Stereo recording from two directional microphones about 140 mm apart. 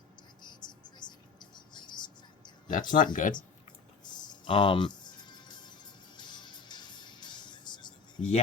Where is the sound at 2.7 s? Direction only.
70° left (ahead or behind).